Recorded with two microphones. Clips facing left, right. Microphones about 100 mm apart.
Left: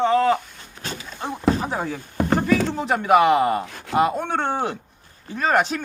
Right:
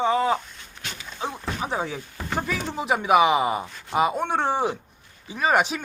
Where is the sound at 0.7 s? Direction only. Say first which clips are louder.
Left 5 dB; 35° left (ahead or behind).